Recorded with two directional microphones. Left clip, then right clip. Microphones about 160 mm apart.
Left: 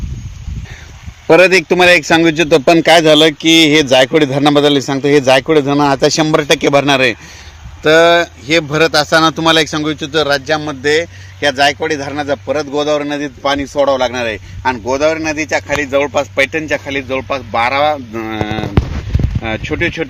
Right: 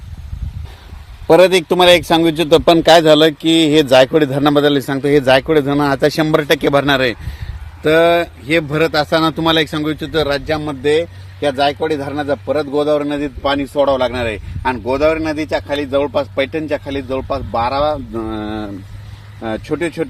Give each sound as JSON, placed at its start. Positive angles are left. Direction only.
{"t": 1.3, "sound": "a man's voice", "side_deg": 35}